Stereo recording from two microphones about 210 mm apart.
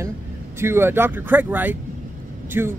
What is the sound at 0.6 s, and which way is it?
Speech, 10° right (ahead or behind).